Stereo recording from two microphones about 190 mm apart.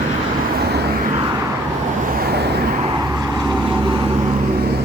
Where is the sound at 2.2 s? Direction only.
60° right (ahead or behind).